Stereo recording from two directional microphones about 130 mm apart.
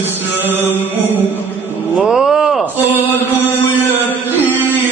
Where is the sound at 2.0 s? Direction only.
5° right (ahead or behind).